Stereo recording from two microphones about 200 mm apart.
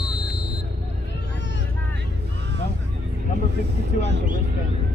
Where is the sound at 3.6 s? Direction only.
60° right (ahead or behind).